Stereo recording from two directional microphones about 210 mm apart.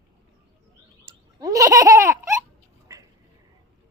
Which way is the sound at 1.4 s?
15° right (ahead or behind).